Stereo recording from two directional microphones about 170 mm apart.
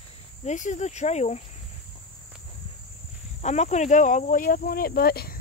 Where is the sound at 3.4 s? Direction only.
40° left (ahead or behind); by 5.4 s 65° left (ahead or behind).